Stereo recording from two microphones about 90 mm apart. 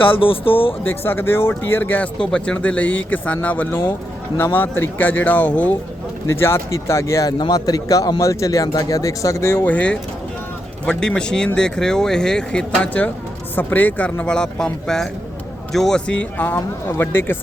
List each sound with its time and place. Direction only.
0.2 s speech: 90° left
0.9 s speech: 25° left (ahead or behind)
2.1 s speech: 10° left (ahead or behind)
6.2 s speech: 30° left (ahead or behind)
7.3 s a man's voice: 50° left (ahead or behind); by 17.3 s 25° left (ahead or behind)